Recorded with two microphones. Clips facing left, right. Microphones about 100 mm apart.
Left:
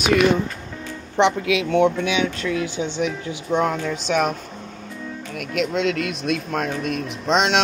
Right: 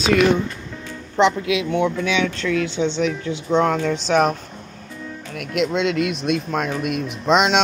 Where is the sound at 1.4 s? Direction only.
30° right (ahead or behind).